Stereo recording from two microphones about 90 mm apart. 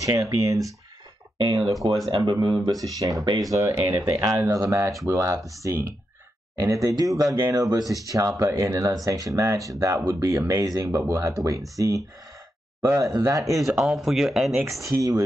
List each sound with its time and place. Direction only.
0.0 s speech: 40° right (ahead or behind)
1.6 s speech: centre (ahead or behind)
2.0 s speech: 75° right (ahead or behind)
2.6 s speech: 40° right (ahead or behind)
13.6 s speech: 5° right (ahead or behind)
14.8 s speech: 35° right (ahead or behind)